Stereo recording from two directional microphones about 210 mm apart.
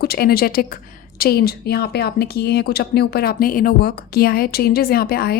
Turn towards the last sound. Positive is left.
turn(degrees=45)  # may be behind; listen again after turning